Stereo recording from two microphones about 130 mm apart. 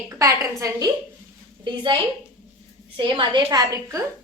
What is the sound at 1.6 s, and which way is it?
A woman's voice, 40° right (ahead or behind).